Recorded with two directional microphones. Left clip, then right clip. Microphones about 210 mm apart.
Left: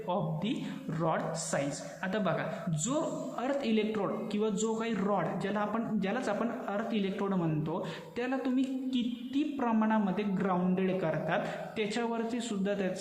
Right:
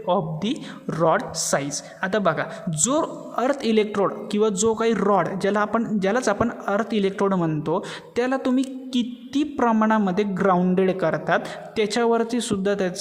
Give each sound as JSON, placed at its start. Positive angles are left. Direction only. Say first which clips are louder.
{"t": 0.1, "sound": "speech", "louder": "right 11 dB", "side_deg": -50}